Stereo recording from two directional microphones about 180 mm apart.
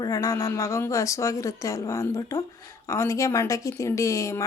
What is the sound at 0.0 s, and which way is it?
A woman's voice, 20° left (ahead or behind).